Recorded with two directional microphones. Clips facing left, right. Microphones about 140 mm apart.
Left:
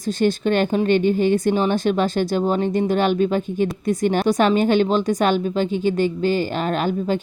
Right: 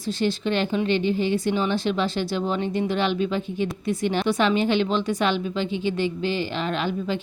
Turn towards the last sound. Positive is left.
turn(degrees=45)  # may be behind; listen again after turning